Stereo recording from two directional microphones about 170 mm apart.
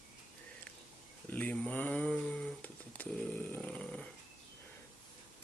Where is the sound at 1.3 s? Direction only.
10° left (ahead or behind).